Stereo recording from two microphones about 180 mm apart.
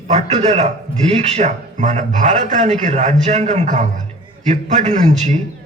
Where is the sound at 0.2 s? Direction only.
40° right (ahead or behind).